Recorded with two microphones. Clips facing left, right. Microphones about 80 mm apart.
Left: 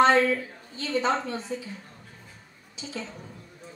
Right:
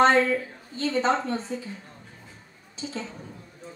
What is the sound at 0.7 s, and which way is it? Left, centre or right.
Speech, right.